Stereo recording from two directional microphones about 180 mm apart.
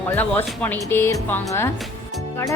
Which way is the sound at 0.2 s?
10° left (ahead or behind).